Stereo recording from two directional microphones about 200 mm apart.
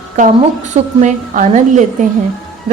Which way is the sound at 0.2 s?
35° right (ahead or behind).